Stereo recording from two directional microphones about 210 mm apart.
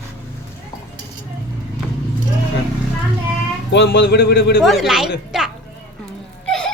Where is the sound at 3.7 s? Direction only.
55° left (ahead or behind).